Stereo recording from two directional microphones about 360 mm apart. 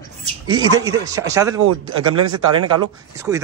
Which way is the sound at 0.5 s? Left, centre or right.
Centre.